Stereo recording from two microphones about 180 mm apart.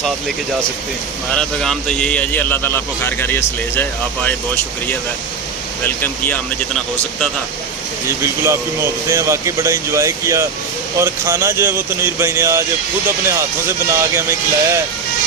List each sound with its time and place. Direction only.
1.4 s a man's voice: 5° left (ahead or behind)
5.8 s a man's voice: 10° left (ahead or behind)
8.2 s speech: 15° right (ahead or behind)